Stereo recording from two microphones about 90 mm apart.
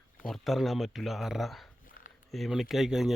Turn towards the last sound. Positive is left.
turn(degrees=-5)  # may be behind; listen again after turning